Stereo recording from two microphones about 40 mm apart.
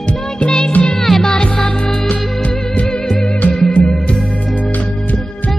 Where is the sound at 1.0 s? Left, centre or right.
Centre.